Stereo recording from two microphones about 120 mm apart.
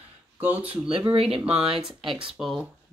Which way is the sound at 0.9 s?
50° right (ahead or behind).